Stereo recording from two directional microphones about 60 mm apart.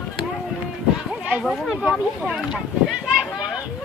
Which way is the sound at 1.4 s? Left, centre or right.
Centre.